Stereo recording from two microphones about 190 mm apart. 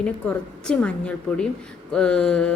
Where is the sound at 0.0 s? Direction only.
5° left (ahead or behind).